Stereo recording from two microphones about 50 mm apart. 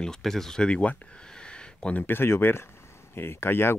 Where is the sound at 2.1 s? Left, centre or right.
Left.